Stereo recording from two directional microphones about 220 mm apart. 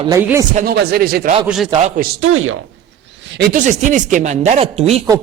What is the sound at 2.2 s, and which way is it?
Speech, 65° right (ahead or behind).